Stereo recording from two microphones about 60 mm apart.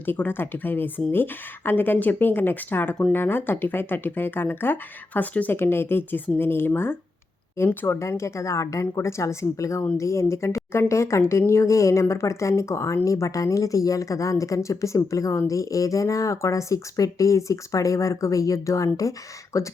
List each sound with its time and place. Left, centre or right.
0.0 s speech: left
5.5 s speech: left
7.9 s speech: left